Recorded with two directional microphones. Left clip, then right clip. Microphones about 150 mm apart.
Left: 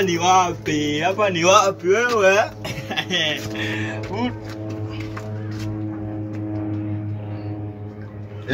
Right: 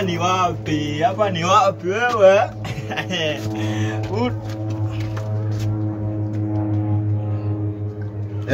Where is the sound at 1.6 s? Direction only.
Centre (ahead or behind).